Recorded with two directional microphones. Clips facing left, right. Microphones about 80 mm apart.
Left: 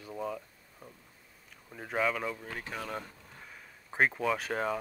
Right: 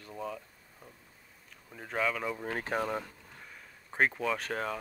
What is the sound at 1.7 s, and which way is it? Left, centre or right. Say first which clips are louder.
Speech: left 1 dB; centre.